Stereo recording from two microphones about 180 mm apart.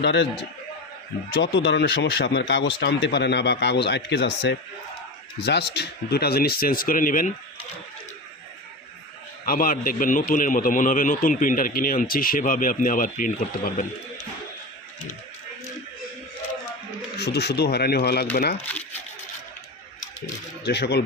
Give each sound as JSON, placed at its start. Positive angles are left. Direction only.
{"t": 0.0, "sound": "speech", "side_deg": 75}
{"t": 1.3, "sound": "speech", "side_deg": 90}
{"t": 9.5, "sound": "a man's voice", "side_deg": 50}
{"t": 17.2, "sound": "speech", "side_deg": 65}
{"t": 18.7, "sound": "speech", "side_deg": 10}
{"t": 20.7, "sound": "speech", "side_deg": 65}